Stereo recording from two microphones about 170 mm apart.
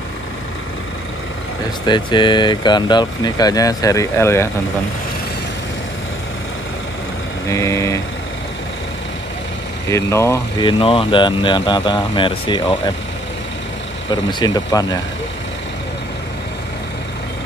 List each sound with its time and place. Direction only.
1.9 s speech: 25° left (ahead or behind)
7.4 s speech: 15° left (ahead or behind)
9.8 s speech: 15° left (ahead or behind)
10.7 s speech: 30° left (ahead or behind)
14.4 s speech: 20° left (ahead or behind)